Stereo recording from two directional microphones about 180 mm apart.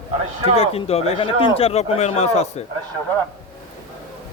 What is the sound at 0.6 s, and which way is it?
Speech, 35° left (ahead or behind).